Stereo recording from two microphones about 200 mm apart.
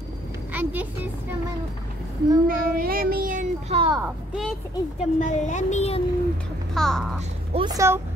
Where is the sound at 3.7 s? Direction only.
25° right (ahead or behind).